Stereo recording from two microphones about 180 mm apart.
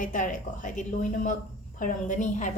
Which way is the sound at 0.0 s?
45° left (ahead or behind).